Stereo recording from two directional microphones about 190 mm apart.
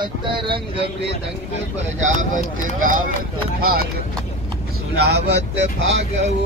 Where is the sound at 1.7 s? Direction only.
40° right (ahead or behind).